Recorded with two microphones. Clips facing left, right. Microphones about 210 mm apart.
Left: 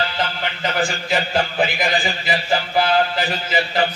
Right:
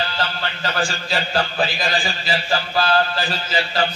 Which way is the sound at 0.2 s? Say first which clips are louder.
Left 2 dB; 20° left (ahead or behind).